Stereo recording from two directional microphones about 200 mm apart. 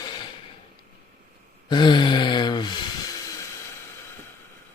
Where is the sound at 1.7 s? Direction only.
20° left (ahead or behind).